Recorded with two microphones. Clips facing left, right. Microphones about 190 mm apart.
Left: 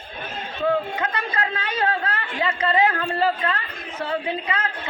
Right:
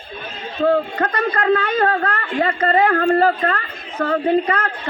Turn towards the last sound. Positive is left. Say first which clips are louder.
# right 9 dB
turn(degrees=-50)  # may be behind; listen again after turning